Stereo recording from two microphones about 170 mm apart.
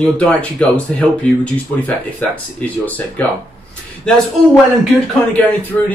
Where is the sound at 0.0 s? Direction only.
5° left (ahead or behind).